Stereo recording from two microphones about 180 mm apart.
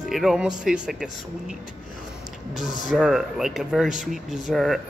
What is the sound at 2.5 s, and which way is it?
Speech, 45° left (ahead or behind).